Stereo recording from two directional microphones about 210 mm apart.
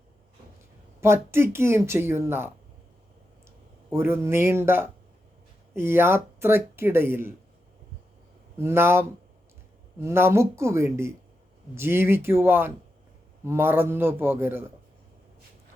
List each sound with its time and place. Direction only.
1.0 s speech: 10° right (ahead or behind)
3.8 s speech: 10° right (ahead or behind)
8.5 s speech: 10° right (ahead or behind)